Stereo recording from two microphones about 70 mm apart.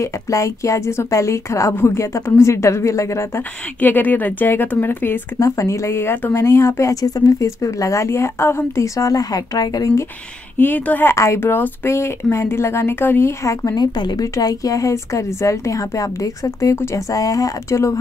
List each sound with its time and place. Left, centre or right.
0.0 s speech: left
3.8 s a woman's voice: left
5.4 s speech: left
10.6 s a woman's voice: left
13.4 s speech: left
13.7 s speech: left
14.3 s speech: left
16.7 s speech: left
17.1 s speech: left